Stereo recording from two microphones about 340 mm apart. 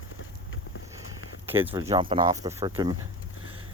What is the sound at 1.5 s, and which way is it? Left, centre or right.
Speech, centre.